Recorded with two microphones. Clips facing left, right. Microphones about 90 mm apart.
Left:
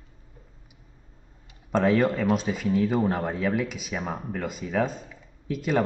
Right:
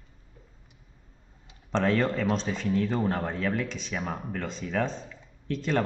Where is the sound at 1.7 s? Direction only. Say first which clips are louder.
Left 4 dB; 10° left (ahead or behind).